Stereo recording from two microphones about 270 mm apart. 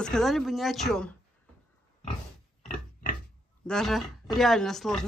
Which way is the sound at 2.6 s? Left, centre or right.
Left.